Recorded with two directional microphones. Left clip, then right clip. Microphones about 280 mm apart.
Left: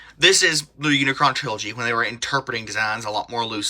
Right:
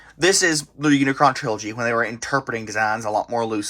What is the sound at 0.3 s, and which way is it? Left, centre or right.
Speech, centre.